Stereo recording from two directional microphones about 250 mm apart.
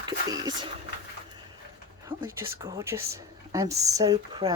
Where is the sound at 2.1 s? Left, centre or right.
Centre.